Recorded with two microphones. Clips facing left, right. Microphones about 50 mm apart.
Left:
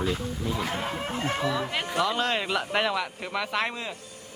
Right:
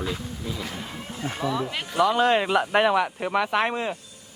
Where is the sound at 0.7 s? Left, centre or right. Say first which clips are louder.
Left 5 dB; left.